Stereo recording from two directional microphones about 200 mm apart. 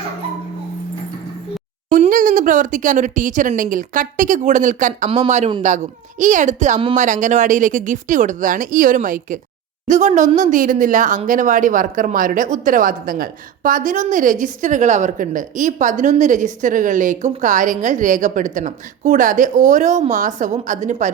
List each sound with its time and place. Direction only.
1.9 s speech: 40° right (ahead or behind)